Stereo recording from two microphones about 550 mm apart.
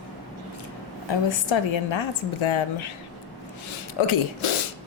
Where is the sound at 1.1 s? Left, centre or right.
Left.